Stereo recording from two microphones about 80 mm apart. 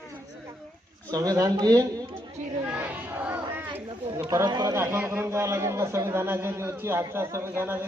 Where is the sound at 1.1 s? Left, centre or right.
Right.